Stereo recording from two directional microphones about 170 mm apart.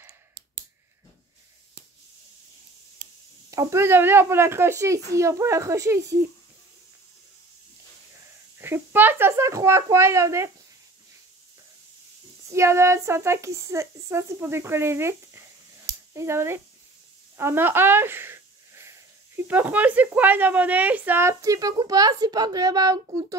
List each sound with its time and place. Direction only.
3.4 s speech: 20° right (ahead or behind)
8.5 s speech: 15° right (ahead or behind)
12.4 s speech: 15° right (ahead or behind)